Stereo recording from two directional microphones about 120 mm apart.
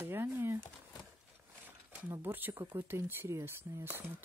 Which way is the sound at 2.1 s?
15° right (ahead or behind).